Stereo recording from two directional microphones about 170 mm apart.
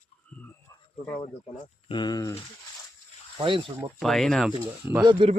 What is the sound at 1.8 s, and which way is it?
Speech, 25° left (ahead or behind).